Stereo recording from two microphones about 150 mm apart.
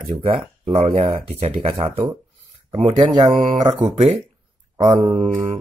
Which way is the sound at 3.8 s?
40° right (ahead or behind).